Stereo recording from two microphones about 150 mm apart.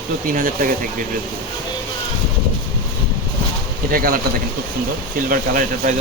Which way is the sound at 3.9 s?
70° right (ahead or behind).